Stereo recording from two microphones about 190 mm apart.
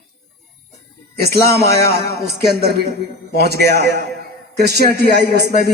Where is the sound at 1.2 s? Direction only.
55° right (ahead or behind).